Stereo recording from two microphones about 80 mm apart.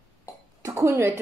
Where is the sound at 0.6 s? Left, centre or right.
Right.